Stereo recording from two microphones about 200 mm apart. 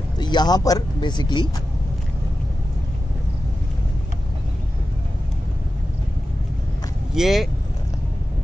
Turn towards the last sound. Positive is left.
turn(degrees=0)  # may be behind; listen again after turning